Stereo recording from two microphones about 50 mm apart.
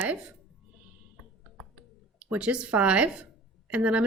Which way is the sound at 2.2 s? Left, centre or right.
Right.